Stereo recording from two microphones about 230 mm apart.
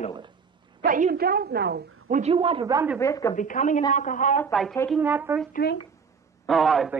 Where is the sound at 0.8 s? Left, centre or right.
Right.